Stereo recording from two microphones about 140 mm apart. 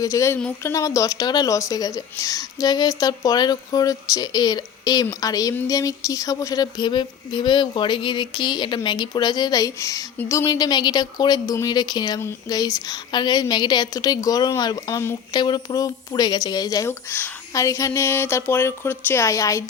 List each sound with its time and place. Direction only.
0.0 s a woman's voice: 20° left (ahead or behind)